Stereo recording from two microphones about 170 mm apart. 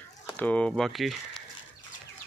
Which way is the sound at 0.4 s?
10° left (ahead or behind).